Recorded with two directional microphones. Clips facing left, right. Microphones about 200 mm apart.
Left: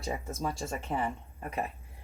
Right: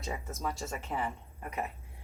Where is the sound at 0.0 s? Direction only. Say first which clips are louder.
Left 3 dB; 30° left (ahead or behind).